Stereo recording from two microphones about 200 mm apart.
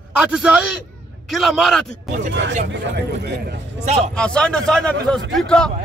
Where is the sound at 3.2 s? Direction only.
55° right (ahead or behind).